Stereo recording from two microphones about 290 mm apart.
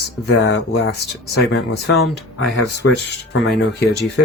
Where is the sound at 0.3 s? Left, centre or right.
Left.